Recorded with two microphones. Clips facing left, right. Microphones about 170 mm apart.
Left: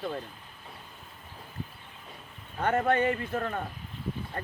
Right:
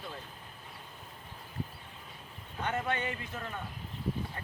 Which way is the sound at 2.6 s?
55° left (ahead or behind).